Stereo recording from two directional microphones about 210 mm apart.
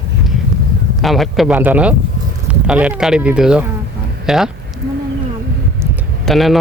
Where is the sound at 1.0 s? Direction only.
Centre (ahead or behind).